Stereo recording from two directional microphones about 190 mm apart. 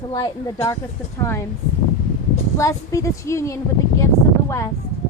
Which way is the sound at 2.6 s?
15° left (ahead or behind).